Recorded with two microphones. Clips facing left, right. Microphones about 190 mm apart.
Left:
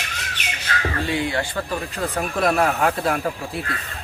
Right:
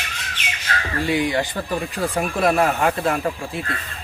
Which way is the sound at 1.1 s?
15° right (ahead or behind).